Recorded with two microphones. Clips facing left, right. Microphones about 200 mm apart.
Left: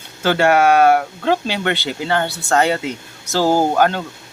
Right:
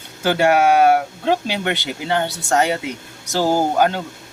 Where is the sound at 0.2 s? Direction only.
15° right (ahead or behind).